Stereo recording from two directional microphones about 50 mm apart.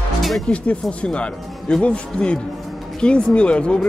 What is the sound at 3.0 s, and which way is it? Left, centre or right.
Speech, left.